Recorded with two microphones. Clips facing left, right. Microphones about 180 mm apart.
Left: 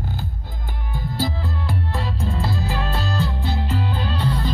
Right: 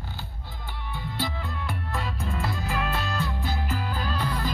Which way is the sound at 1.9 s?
30° left (ahead or behind).